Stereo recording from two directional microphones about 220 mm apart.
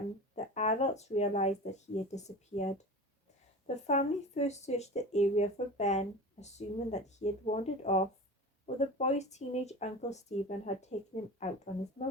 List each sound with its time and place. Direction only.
0.3 s speech: 30° left (ahead or behind)
3.8 s speech: 30° left (ahead or behind)